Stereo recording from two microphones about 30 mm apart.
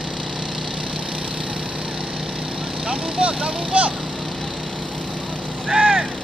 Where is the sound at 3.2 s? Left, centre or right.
Right.